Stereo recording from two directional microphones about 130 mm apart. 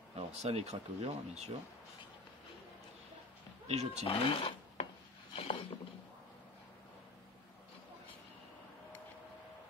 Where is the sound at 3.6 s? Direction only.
60° right (ahead or behind).